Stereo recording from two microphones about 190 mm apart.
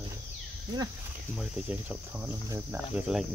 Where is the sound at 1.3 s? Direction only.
5° right (ahead or behind).